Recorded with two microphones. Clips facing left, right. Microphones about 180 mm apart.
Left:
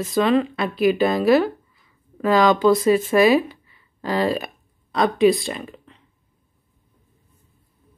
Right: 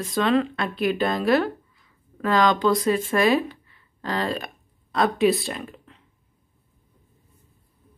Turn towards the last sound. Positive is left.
turn(degrees=0)  # may be behind; listen again after turning